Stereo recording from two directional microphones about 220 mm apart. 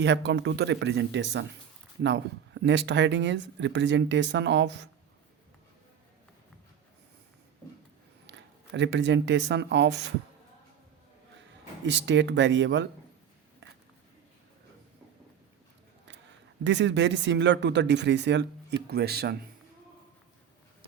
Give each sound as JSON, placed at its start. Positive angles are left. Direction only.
{"t": 0.0, "sound": "speech", "side_deg": -55}
{"t": 8.3, "sound": "speech", "side_deg": -55}
{"t": 11.9, "sound": "speech", "side_deg": -55}
{"t": 16.6, "sound": "speech", "side_deg": -55}